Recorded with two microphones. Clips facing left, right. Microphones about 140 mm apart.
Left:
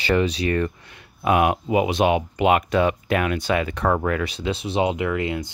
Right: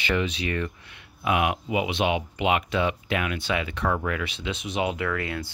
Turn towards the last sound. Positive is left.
turn(degrees=20)  # may be behind; listen again after turning